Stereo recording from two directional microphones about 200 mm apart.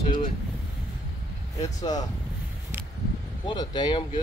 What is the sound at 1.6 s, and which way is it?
Speech, 20° left (ahead or behind).